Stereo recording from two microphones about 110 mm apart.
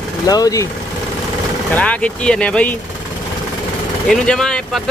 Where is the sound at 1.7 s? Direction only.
10° left (ahead or behind).